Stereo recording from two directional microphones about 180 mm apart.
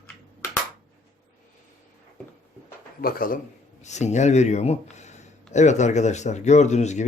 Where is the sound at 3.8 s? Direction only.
40° left (ahead or behind).